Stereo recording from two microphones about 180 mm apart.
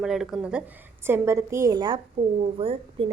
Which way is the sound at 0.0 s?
Centre (ahead or behind).